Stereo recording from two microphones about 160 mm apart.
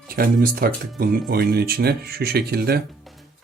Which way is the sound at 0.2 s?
70° right (ahead or behind).